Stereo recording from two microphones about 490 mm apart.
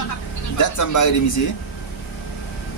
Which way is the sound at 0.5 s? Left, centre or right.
Left.